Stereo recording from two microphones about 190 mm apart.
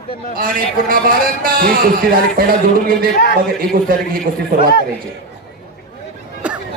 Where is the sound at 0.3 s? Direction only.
50° right (ahead or behind).